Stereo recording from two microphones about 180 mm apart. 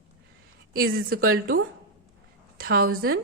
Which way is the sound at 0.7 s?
55° right (ahead or behind).